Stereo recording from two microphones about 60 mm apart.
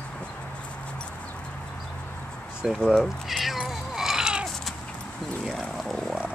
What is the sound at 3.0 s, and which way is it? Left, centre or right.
Cat, centre.